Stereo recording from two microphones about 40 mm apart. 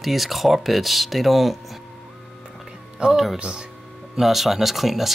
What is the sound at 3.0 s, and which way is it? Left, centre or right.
Speech, centre.